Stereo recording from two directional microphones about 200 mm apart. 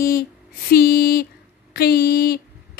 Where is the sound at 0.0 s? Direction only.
50° left (ahead or behind).